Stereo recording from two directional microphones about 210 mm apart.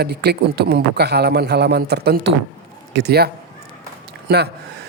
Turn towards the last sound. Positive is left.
turn(degrees=-50)  # may be behind; listen again after turning